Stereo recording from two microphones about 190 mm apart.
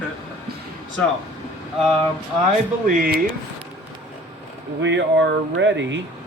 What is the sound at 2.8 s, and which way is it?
Speech, 50° right (ahead or behind).